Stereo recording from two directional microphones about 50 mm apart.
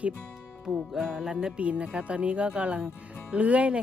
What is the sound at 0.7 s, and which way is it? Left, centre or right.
Music, centre.